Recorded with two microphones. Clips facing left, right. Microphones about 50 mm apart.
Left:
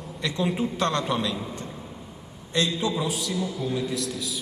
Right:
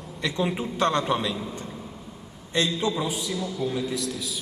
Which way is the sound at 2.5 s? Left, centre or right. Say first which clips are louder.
Even; right.